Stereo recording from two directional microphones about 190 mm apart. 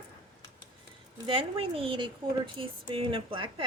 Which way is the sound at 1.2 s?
30° right (ahead or behind).